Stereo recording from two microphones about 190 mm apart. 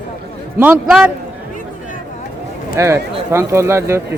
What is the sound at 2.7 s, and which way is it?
A man's voice, 15° right (ahead or behind).